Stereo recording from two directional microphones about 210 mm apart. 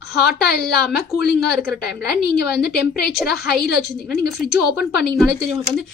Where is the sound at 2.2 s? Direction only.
50° left (ahead or behind).